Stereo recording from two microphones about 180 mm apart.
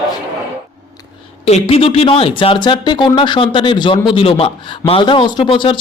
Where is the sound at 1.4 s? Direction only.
35° left (ahead or behind).